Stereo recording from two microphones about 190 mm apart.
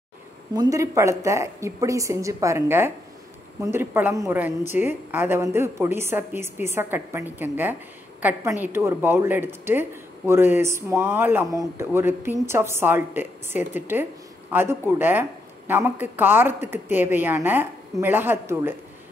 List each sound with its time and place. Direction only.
0.6 s a woman's voice: 15° right (ahead or behind)